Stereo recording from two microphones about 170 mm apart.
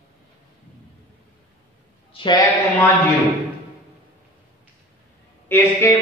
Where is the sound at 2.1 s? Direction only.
30° left (ahead or behind).